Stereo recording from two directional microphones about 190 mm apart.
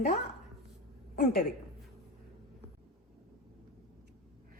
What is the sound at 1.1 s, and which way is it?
Speech, 50° left (ahead or behind).